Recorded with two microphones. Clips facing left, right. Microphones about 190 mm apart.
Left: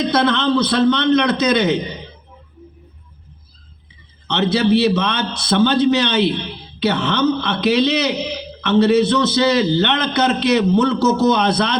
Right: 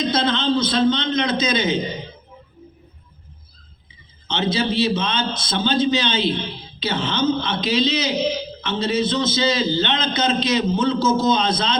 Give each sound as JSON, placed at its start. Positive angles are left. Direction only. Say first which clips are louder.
{"t": 0.0, "sound": "a man's voice", "louder": "left 4 dB", "side_deg": 65}
{"t": 4.3, "sound": "a man's voice", "louder": "left 6 dB", "side_deg": 65}